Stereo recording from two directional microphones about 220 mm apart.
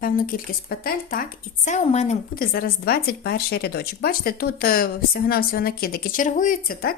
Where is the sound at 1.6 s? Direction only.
30° left (ahead or behind).